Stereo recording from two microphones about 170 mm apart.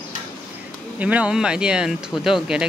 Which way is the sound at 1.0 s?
10° right (ahead or behind).